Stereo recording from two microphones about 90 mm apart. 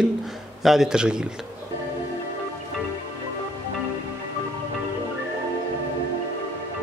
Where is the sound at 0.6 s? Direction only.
5° right (ahead or behind).